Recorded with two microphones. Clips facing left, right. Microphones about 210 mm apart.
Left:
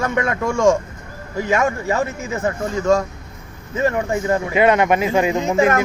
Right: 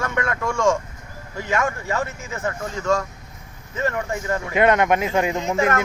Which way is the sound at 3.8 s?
20° left (ahead or behind).